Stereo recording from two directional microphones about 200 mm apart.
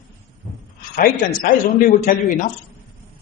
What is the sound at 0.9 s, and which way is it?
A man's voice, 45° left (ahead or behind).